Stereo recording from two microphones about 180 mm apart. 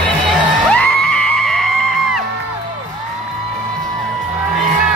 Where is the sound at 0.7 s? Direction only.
5° left (ahead or behind).